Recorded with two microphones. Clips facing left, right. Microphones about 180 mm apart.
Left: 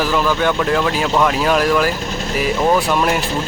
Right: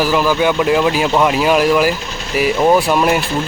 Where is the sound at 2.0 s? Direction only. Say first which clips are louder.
Left 4 dB; 45° left (ahead or behind).